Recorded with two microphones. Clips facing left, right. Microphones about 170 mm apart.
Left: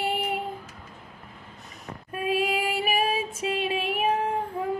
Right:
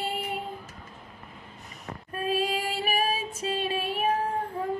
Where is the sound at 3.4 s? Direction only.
30° right (ahead or behind).